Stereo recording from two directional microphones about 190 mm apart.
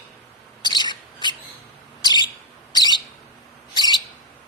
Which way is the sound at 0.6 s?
25° left (ahead or behind).